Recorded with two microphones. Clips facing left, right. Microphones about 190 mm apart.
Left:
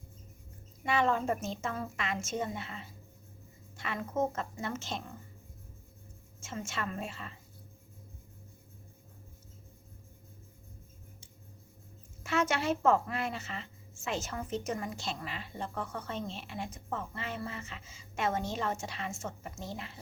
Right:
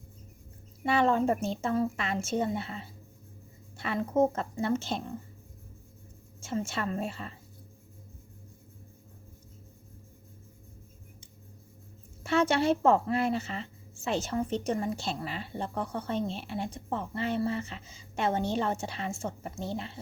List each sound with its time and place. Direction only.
0.9 s a woman's voice: 35° right (ahead or behind)
6.4 s a woman's voice: 35° right (ahead or behind)
12.2 s a woman's voice: 30° right (ahead or behind)